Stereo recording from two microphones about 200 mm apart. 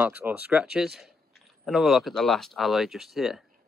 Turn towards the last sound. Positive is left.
turn(degrees=0)  # may be behind; listen again after turning